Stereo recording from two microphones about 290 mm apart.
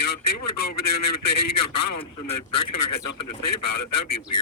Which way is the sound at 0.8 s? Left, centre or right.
Left.